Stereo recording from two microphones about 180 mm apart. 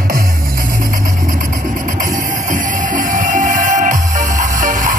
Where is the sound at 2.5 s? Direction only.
45° right (ahead or behind).